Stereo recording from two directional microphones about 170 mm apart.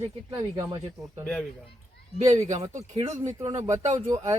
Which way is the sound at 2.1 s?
40° right (ahead or behind).